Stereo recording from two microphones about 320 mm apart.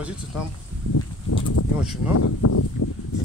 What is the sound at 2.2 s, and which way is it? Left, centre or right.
Speech, left.